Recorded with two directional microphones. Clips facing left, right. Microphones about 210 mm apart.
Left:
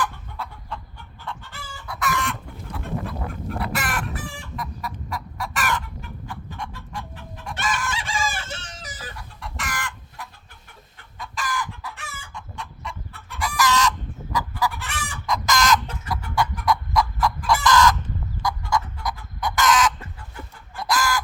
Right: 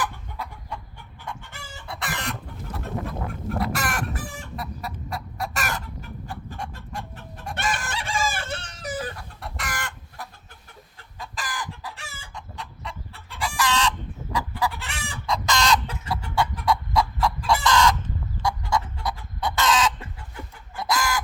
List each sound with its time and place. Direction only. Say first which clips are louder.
0.0 s chicken: left 2 dB; 15° right (ahead or behind); by 7.0 s 40° right (ahead or behind)
7.5 s chicken: left 1 dB; 55° right (ahead or behind)
11.2 s chicken: left 4 dB; 35° right (ahead or behind)